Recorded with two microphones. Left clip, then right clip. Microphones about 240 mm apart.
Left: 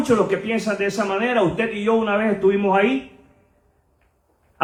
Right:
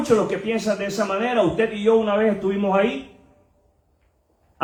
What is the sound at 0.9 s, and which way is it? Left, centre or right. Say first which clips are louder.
Speech: left 1 dB; left.